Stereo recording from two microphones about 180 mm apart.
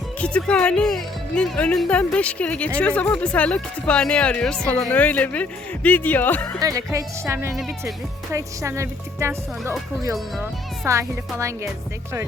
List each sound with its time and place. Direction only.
0.2 s speech: 5° left (ahead or behind)
6.6 s speech: 20° right (ahead or behind)
10.8 s speech: 15° right (ahead or behind)